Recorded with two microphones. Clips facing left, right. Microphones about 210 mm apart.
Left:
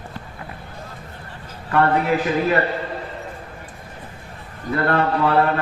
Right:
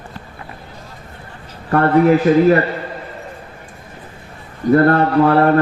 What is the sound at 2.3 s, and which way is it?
Speech, 40° right (ahead or behind).